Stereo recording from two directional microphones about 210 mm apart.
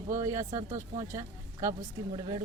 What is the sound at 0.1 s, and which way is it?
Speech, 15° right (ahead or behind).